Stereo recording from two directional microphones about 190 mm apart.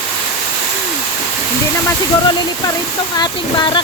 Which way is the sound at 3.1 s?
20° left (ahead or behind).